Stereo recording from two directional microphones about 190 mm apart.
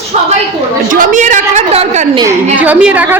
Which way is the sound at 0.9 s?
45° right (ahead or behind).